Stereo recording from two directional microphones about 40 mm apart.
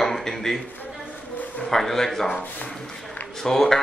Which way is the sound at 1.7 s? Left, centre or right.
Centre.